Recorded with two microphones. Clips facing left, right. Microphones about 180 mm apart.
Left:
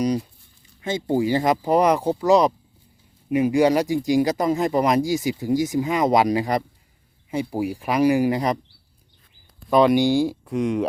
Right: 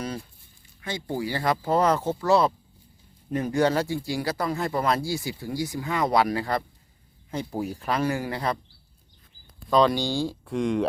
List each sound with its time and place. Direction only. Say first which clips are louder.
0.0 s speech: left 10 dB; 15° left (ahead or behind)
9.6 s speech: left 5 dB; 20° left (ahead or behind)